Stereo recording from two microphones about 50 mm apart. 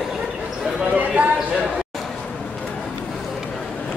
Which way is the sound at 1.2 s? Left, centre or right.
Right.